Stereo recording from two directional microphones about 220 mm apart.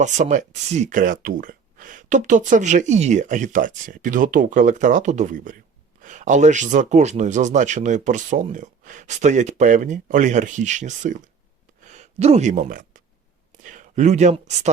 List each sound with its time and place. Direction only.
0.0 s speech: 35° right (ahead or behind)